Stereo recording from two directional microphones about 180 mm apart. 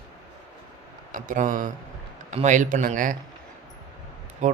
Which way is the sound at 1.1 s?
45° right (ahead or behind).